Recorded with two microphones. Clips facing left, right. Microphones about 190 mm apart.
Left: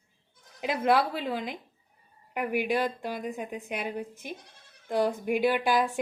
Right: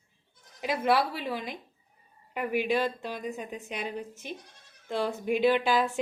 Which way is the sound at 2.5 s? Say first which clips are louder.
Right 1 dB; 15° left (ahead or behind).